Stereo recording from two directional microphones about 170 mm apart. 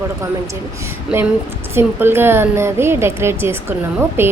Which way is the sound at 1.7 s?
15° right (ahead or behind).